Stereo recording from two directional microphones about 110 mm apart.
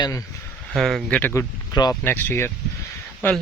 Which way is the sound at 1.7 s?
35° left (ahead or behind).